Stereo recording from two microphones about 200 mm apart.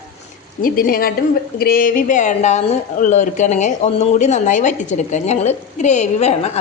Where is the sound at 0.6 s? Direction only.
45° left (ahead or behind).